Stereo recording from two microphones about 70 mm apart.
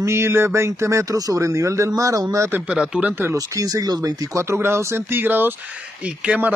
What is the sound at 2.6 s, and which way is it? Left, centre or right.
Speech, centre.